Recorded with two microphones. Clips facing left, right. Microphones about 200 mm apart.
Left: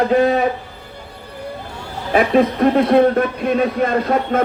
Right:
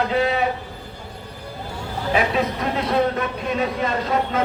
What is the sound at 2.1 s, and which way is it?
Music, 55° left (ahead or behind).